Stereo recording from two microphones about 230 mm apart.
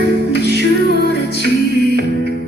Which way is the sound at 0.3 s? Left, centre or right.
Left.